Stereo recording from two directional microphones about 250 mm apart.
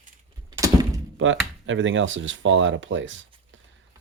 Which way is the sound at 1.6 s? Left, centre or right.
Right.